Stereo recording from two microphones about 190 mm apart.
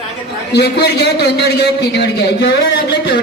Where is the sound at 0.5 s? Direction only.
60° left (ahead or behind).